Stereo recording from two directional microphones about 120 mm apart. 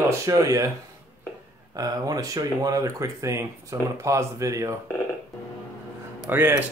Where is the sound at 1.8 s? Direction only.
30° right (ahead or behind).